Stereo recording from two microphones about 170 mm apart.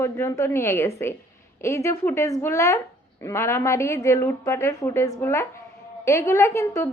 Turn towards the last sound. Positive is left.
turn(degrees=15)  # may be behind; listen again after turning